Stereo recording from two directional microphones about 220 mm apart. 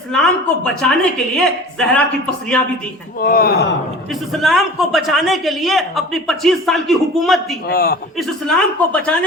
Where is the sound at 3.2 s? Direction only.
40° left (ahead or behind).